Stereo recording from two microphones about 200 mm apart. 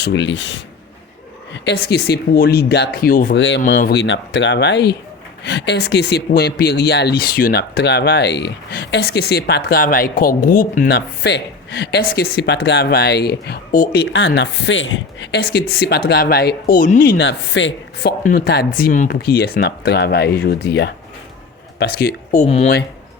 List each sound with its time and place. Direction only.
0.0 s speech: 65° left (ahead or behind)
1.6 s speech: 55° left (ahead or behind)
3.3 s speech: 65° left (ahead or behind); by 14.0 s 45° left (ahead or behind)
14.1 s speech: 65° left (ahead or behind)
18.2 s speech: 45° left (ahead or behind)
22.3 s speech: 35° left (ahead or behind)